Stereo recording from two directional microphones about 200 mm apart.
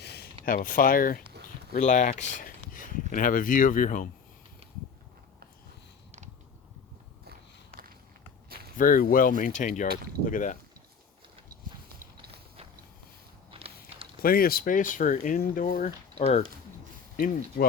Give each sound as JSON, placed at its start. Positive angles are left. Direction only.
{"t": 0.0, "sound": "a sound", "side_deg": 55}
{"t": 0.4, "sound": "speech", "side_deg": 45}
{"t": 8.8, "sound": "speech", "side_deg": 45}
{"t": 13.5, "sound": "walk", "side_deg": -30}
{"t": 14.2, "sound": "speech", "side_deg": 45}